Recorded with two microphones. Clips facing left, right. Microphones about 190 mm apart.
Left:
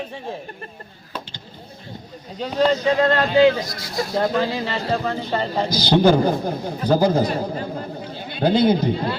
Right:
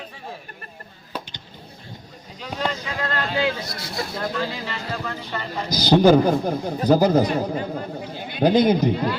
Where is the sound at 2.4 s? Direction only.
30° left (ahead or behind).